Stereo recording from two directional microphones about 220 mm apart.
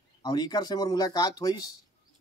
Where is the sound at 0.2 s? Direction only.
20° left (ahead or behind).